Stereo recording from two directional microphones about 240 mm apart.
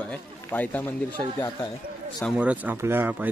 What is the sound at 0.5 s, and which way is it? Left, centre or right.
Speech, centre.